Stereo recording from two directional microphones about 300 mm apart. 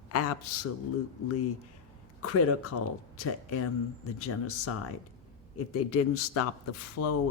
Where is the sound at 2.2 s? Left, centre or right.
Left.